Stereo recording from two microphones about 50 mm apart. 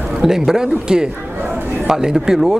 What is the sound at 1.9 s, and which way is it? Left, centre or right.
Speech, centre.